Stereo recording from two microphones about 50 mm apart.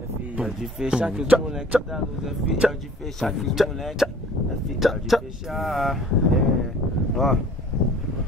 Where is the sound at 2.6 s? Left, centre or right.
Centre.